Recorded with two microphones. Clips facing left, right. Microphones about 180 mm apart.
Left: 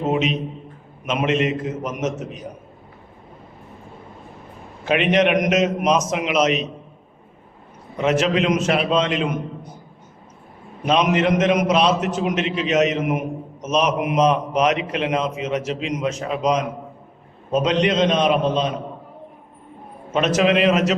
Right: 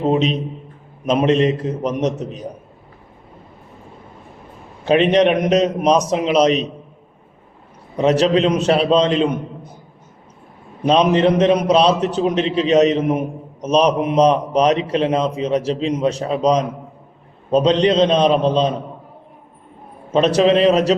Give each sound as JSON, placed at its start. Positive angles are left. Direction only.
{"t": 0.0, "sound": "a man's voice", "side_deg": -35}
{"t": 4.9, "sound": "a man's voice", "side_deg": -35}
{"t": 7.9, "sound": "a man's voice", "side_deg": -35}
{"t": 10.8, "sound": "a man's voice", "side_deg": -35}
{"t": 20.1, "sound": "a man's voice", "side_deg": -35}